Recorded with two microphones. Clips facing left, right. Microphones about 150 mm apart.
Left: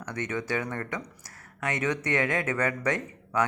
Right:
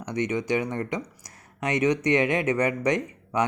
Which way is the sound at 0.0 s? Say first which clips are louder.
Right 5 dB; 15° right (ahead or behind).